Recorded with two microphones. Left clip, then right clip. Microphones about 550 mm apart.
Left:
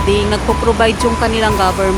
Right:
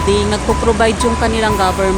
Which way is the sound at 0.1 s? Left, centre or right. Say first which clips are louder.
Even; left.